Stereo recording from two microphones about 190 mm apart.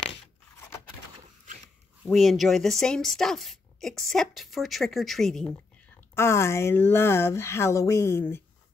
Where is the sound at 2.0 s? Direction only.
Centre (ahead or behind).